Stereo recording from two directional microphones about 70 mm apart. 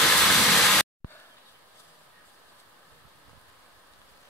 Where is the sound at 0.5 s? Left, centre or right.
Centre.